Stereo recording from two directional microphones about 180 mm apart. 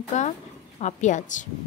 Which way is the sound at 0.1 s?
40° left (ahead or behind).